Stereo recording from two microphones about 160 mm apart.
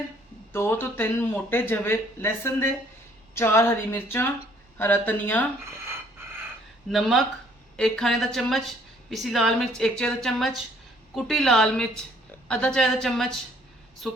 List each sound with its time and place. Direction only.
0.5 s speech: 15° left (ahead or behind)
6.8 s a woman's voice: centre (ahead or behind)